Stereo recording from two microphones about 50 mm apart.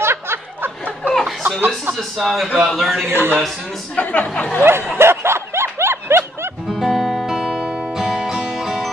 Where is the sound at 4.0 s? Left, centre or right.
Left.